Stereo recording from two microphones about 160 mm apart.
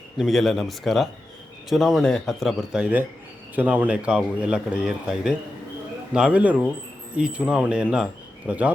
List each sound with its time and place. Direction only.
0.2 s a man's voice: centre (ahead or behind)